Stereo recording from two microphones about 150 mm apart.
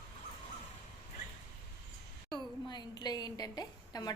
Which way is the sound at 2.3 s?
30° left (ahead or behind).